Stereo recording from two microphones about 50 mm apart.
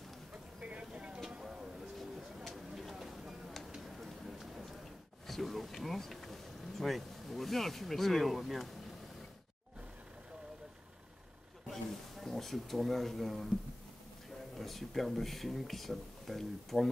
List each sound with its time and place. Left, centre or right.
0.3 s vehicle: right
1.4 s music: centre
2.0 s a sound: centre
5.2 s bee: centre
11.7 s a sound: centre
14.6 s speech: centre